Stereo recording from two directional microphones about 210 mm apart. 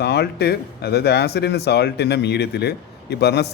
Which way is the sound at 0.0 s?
50° left (ahead or behind).